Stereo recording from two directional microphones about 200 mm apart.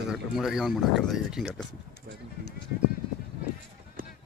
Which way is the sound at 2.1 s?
55° right (ahead or behind).